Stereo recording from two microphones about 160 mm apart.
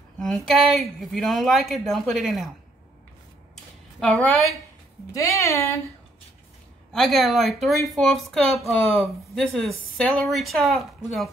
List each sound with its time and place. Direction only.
0.2 s speech: centre (ahead or behind)
4.0 s a woman's voice: 5° left (ahead or behind)
5.1 s speech: 20° left (ahead or behind)
6.9 s speech: centre (ahead or behind)